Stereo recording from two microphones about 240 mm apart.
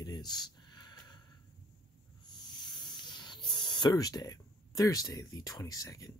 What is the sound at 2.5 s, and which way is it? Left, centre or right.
Snake, centre.